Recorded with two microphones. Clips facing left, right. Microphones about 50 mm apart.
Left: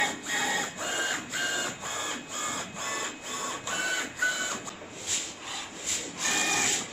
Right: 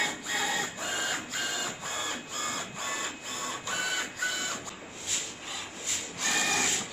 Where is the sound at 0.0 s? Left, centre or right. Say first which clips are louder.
Left 2 dB; centre.